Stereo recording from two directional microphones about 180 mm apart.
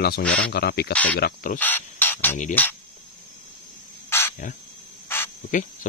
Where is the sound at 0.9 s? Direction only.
10° left (ahead or behind).